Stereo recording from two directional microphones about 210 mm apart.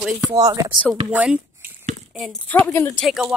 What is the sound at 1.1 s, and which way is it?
Speech, 5° right (ahead or behind).